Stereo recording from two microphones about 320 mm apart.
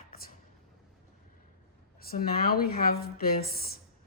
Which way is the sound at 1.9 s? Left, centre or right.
Left.